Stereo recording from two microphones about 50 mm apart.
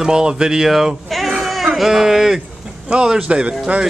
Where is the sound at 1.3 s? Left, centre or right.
Centre.